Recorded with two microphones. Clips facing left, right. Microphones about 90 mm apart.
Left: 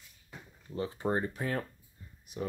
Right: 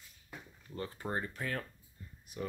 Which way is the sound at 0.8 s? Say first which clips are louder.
Left 6 dB; 15° left (ahead or behind).